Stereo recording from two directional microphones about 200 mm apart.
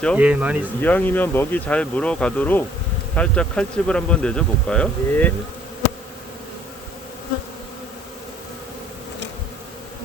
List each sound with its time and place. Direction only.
0.2 s speech: 5° right (ahead or behind)
0.8 s speech: 10° left (ahead or behind)